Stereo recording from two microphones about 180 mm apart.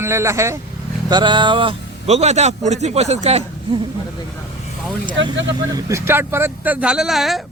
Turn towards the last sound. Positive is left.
turn(degrees=0)  # may be behind; listen again after turning